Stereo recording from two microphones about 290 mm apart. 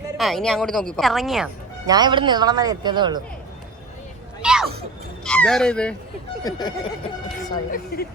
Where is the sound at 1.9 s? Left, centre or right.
Centre.